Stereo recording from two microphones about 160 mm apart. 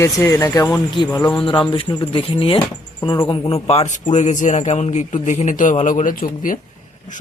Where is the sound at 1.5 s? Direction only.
30° left (ahead or behind).